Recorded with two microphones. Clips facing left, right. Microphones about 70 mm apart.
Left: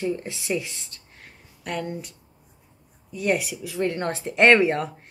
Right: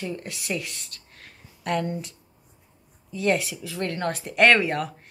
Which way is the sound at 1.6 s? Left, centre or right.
Centre.